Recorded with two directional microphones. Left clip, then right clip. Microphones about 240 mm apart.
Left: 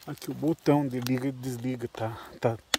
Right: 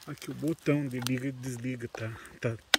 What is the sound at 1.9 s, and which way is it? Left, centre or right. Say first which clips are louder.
Speech: left 5 dB; left.